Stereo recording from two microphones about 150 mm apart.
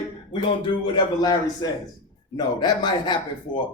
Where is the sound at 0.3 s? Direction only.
30° left (ahead or behind).